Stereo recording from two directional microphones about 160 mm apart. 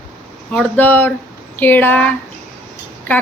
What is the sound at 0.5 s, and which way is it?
A woman's voice, 5° left (ahead or behind).